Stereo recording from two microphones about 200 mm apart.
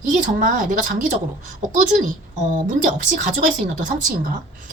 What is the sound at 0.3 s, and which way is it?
Speech, 40° right (ahead or behind).